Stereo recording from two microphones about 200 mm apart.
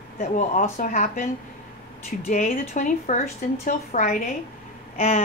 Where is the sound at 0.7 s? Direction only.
35° left (ahead or behind).